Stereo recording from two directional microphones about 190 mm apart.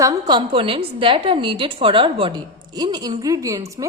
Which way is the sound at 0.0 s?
20° right (ahead or behind).